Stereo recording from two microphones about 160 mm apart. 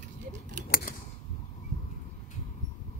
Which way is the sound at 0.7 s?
65° left (ahead or behind).